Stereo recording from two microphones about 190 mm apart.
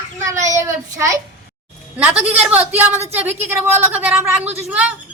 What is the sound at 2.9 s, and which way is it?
Speech, 35° right (ahead or behind).